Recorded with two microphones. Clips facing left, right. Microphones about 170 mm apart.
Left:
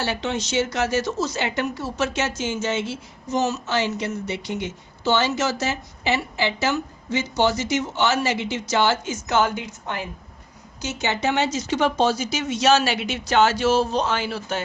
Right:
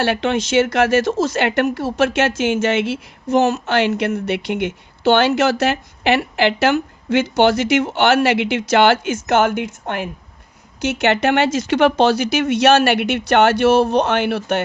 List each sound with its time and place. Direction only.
0.0 s speech: 60° right (ahead or behind)
1.0 s speech: 90° right; by 14.6 s 65° right (ahead or behind)